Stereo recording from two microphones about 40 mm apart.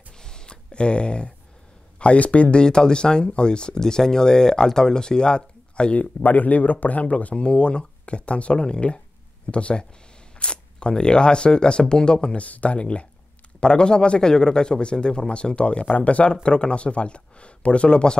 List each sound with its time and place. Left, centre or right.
0.2 s a sound: centre
2.0 s speech: left
2.6 s speech: centre
5.9 s speech: left
7.3 s speech: left
12.4 s speech: left